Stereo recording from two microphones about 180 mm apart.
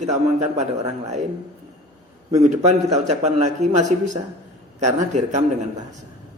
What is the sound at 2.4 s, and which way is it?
A man's voice, 40° right (ahead or behind).